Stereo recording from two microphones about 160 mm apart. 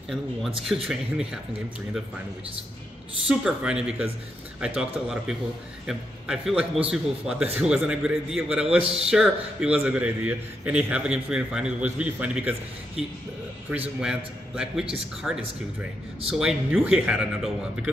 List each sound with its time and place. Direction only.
0.1 s a man's voice: centre (ahead or behind)
3.3 s a man's voice: 5° right (ahead or behind)
8.6 s speech: 40° right (ahead or behind)
9.1 s a man's voice: 5° right (ahead or behind)